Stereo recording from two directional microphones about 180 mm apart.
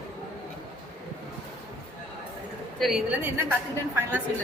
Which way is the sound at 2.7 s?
Centre (ahead or behind).